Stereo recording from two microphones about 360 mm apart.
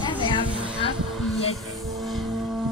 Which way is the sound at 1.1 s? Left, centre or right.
Centre.